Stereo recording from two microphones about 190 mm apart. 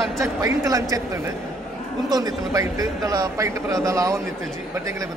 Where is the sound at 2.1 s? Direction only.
20° right (ahead or behind).